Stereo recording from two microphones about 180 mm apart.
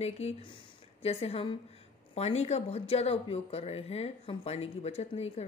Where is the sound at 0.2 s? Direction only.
35° left (ahead or behind).